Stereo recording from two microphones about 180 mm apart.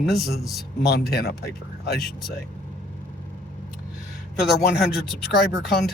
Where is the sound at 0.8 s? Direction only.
60° left (ahead or behind).